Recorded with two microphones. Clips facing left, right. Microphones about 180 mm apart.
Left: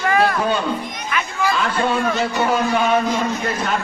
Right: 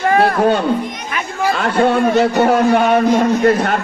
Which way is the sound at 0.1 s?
30° right (ahead or behind).